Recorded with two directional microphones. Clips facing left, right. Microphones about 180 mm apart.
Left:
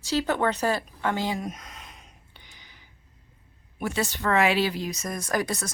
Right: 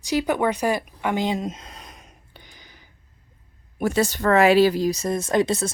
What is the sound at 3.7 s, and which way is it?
Speech, 40° right (ahead or behind).